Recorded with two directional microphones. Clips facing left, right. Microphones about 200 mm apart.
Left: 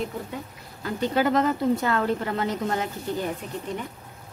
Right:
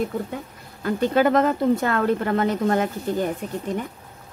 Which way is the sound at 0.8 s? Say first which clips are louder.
Right 4 dB; 55° right (ahead or behind).